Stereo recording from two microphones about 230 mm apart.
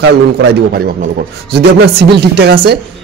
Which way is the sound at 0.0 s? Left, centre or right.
Right.